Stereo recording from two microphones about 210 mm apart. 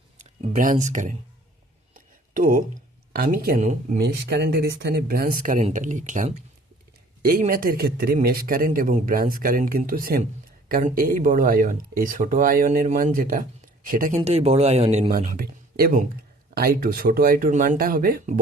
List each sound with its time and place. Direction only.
0.2 s speech: 35° right (ahead or behind)
2.3 s speech: 40° right (ahead or behind)
3.9 s a man's voice: 55° right (ahead or behind)
14.2 s speech: 30° right (ahead or behind)
15.4 s a man's voice: 45° right (ahead or behind)